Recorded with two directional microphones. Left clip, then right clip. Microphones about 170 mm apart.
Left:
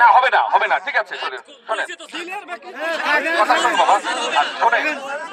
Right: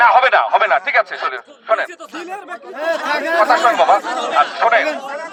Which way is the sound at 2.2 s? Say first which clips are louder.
Right 1 dB; 80° right.